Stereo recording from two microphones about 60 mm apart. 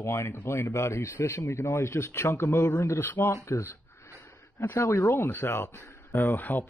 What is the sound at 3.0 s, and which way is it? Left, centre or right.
Speech, left.